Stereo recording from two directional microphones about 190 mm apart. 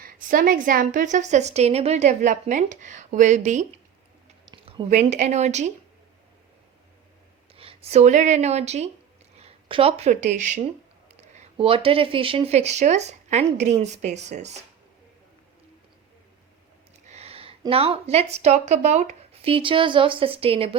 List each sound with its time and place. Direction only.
0.0 s a woman's voice: 45° right (ahead or behind)
4.5 s a sound: 25° right (ahead or behind)
4.9 s a woman's voice: 40° right (ahead or behind)
7.5 s a woman's voice: 30° right (ahead or behind)
17.1 s speech: 35° right (ahead or behind)